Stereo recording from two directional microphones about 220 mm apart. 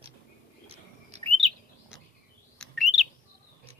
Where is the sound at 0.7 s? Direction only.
25° right (ahead or behind).